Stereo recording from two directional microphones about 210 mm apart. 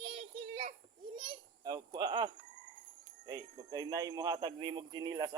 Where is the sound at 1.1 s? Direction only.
20° right (ahead or behind).